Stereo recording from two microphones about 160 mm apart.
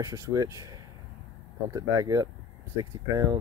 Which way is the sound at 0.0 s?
15° right (ahead or behind).